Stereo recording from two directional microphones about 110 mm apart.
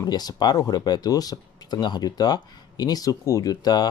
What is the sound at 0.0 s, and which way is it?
Speech, 35° left (ahead or behind).